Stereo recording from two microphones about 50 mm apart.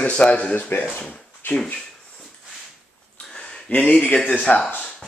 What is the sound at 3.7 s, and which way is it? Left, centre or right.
Speech, left.